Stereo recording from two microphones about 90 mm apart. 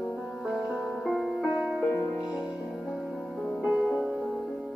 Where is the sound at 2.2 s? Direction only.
45° left (ahead or behind).